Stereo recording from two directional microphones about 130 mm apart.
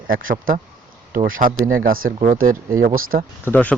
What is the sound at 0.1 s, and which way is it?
Speech, 90° right.